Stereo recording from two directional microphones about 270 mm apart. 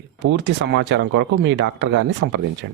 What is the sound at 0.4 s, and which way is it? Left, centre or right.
Speech, right.